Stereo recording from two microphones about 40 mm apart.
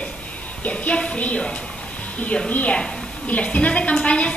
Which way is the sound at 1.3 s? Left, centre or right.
Left.